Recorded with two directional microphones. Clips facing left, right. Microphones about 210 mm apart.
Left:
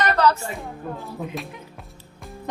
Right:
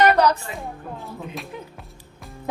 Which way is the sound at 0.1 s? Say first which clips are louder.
Right 1 dB; 15° right (ahead or behind).